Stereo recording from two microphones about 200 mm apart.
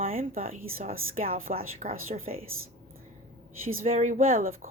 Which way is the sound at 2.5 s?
90° right.